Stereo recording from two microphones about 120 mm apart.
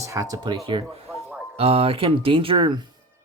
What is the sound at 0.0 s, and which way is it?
Speech, 25° right (ahead or behind).